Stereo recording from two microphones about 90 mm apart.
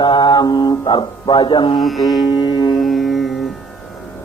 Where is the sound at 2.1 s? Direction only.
50° left (ahead or behind).